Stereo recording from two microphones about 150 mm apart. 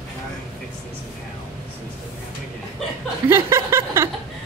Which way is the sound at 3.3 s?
20° right (ahead or behind).